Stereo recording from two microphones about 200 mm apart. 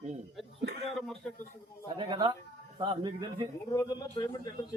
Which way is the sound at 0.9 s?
Centre (ahead or behind).